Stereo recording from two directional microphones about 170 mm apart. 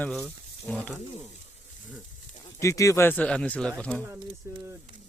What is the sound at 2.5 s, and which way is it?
Speech, 20° left (ahead or behind).